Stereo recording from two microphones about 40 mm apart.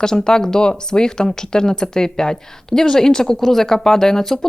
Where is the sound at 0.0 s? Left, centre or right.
Centre.